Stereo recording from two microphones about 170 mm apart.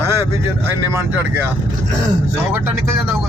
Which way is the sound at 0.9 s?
15° right (ahead or behind).